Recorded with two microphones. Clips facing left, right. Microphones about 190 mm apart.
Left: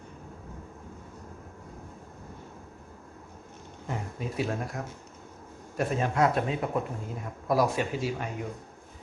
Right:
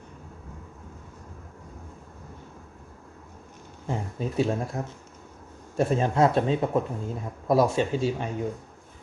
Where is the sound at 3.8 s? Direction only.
30° right (ahead or behind).